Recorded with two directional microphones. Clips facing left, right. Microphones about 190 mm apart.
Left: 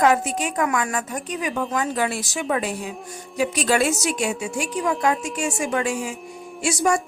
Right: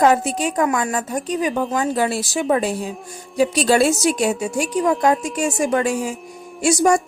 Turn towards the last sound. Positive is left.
turn(degrees=-40)  # may be behind; listen again after turning